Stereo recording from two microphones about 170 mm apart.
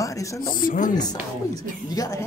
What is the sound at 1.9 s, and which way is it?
Speech, 20° left (ahead or behind).